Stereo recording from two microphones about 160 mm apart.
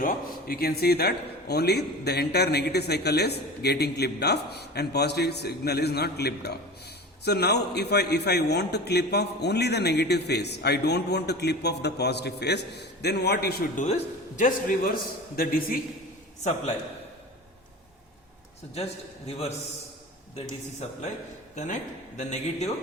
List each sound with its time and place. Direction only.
0.0 s a man's voice: 65° left (ahead or behind)
13.8 s a man's voice: 50° left (ahead or behind)
19.3 s a man's voice: 40° left (ahead or behind)
21.5 s a man's voice: 50° left (ahead or behind)